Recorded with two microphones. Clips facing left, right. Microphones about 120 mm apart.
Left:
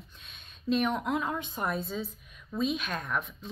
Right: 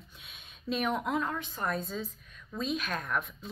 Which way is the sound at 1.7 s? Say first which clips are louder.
Left 1 dB; centre (ahead or behind).